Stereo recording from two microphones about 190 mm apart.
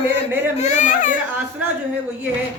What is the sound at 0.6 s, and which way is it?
Speech, 40° left (ahead or behind).